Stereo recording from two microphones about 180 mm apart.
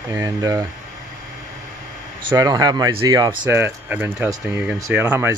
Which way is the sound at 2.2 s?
20° right (ahead or behind).